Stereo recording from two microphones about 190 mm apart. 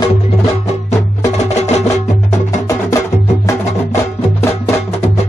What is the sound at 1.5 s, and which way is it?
Music, 35° left (ahead or behind).